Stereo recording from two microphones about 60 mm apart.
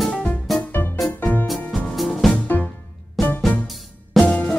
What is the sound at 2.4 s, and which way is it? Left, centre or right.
Music, left.